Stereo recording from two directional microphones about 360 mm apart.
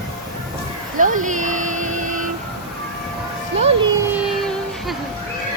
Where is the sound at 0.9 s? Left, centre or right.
Right.